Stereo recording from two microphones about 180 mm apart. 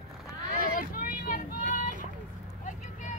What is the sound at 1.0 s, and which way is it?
Vehicle, 50° left (ahead or behind).